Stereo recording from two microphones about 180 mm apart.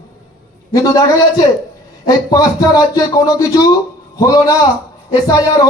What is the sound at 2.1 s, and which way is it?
Speech, 20° left (ahead or behind).